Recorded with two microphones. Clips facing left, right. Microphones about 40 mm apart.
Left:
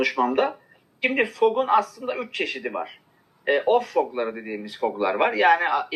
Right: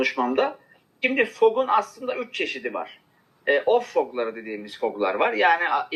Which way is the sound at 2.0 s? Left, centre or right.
Centre.